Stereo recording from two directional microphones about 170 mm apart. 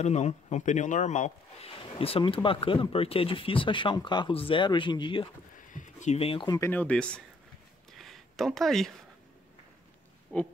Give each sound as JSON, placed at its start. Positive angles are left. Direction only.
{"t": 0.0, "sound": "speech", "side_deg": 40}
{"t": 5.7, "sound": "speech", "side_deg": 45}
{"t": 6.7, "sound": "speech", "side_deg": 10}
{"t": 8.0, "sound": "a sound", "side_deg": 0}
{"t": 10.3, "sound": "pig", "side_deg": 10}